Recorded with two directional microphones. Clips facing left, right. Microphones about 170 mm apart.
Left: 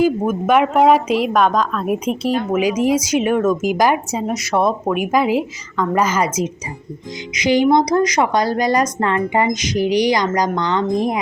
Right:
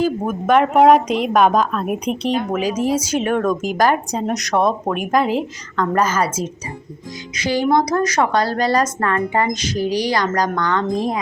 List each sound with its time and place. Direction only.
0.0 s a woman's voice: 5° left (ahead or behind)